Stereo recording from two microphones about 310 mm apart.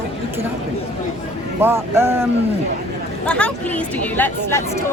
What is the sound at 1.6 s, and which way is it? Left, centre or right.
Speech, centre.